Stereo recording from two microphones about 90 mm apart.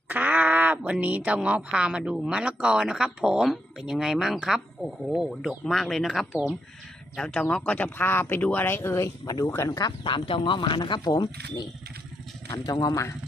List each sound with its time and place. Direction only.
0.1 s speech: 20° right (ahead or behind); by 9.1 s 30° left (ahead or behind)
9.2 s speech: 40° left (ahead or behind)
10.0 s speech: 70° left (ahead or behind); by 13.1 s 40° left (ahead or behind)